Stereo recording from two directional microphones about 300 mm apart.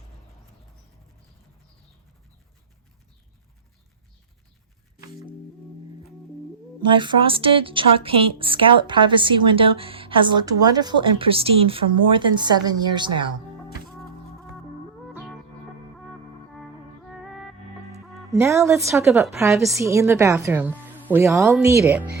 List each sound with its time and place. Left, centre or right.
6.9 s a woman's voice: centre
18.0 s a woman's voice: centre